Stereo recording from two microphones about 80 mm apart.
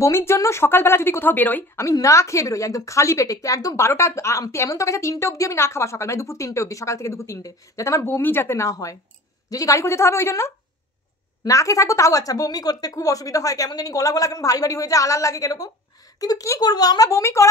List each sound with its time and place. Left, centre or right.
0.0 s a woman's voice: left
1.8 s a woman's voice: left